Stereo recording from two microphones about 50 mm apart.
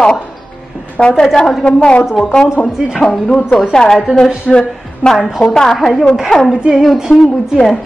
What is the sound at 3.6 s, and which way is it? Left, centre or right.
A woman's voice, centre.